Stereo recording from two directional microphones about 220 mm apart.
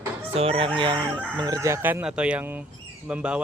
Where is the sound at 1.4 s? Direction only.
15° right (ahead or behind).